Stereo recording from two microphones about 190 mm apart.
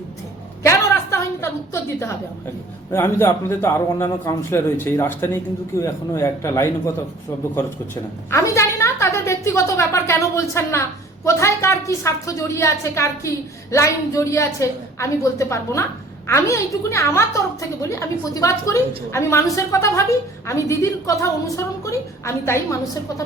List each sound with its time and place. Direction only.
0.6 s a sound: 15° left (ahead or behind)
2.9 s a woman's voice: 15° left (ahead or behind)
8.3 s a woman's voice: 15° left (ahead or behind)